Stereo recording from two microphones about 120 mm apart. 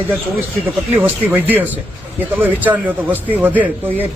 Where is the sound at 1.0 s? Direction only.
15° right (ahead or behind).